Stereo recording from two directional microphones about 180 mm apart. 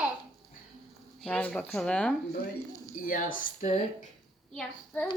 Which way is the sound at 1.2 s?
5° left (ahead or behind).